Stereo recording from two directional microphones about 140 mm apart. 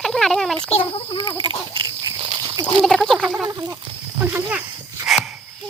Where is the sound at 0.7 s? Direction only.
40° left (ahead or behind).